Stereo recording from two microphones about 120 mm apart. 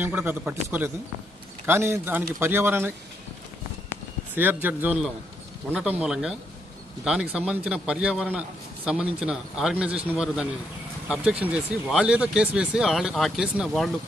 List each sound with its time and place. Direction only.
0.0 s a man's voice: 15° right (ahead or behind)
4.4 s a man's voice: 15° right (ahead or behind); by 13.9 s centre (ahead or behind)